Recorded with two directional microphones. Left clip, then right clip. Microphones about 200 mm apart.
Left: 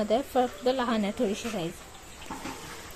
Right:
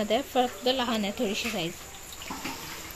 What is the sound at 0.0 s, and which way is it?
Speech, 10° left (ahead or behind).